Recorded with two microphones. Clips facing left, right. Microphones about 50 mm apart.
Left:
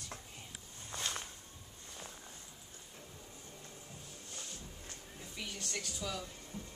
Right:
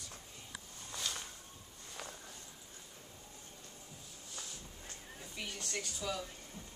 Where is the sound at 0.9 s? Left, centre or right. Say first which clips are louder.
Left 2 dB; left.